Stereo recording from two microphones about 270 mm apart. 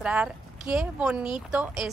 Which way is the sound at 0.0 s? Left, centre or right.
Centre.